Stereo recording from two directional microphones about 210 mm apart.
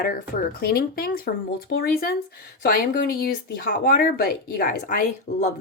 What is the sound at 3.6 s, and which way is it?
Speech, 45° left (ahead or behind).